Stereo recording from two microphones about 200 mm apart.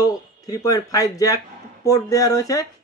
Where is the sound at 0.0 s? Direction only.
15° left (ahead or behind).